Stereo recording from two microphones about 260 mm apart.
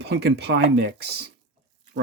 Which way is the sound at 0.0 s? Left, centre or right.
Right.